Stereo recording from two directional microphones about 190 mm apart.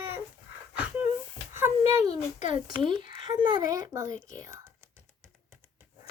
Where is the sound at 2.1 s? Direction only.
40° left (ahead or behind).